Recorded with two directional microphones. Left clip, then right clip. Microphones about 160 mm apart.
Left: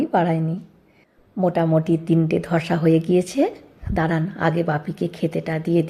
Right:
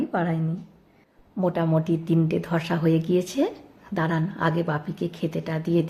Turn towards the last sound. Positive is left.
turn(degrees=15)  # may be behind; listen again after turning